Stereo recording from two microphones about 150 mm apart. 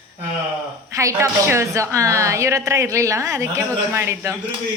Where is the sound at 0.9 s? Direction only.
20° right (ahead or behind).